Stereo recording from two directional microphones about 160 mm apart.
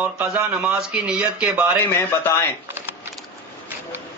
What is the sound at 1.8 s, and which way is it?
Speech, 15° left (ahead or behind).